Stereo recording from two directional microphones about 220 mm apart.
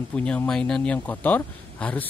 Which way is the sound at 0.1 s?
5° left (ahead or behind).